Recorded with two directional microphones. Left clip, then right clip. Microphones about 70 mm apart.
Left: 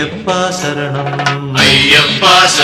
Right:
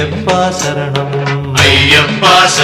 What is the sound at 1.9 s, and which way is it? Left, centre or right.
Music, left.